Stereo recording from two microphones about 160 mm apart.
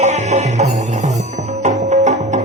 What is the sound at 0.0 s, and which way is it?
Music, 45° right (ahead or behind).